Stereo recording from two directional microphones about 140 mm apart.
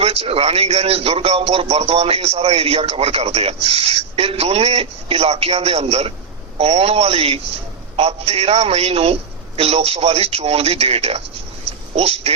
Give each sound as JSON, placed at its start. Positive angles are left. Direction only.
{"t": 0.0, "sound": "a man's voice", "side_deg": -45}